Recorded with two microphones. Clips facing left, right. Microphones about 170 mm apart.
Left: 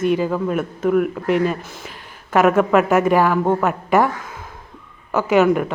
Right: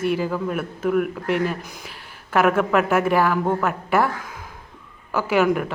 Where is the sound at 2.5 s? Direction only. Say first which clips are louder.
Left 4 dB; 5° left (ahead or behind).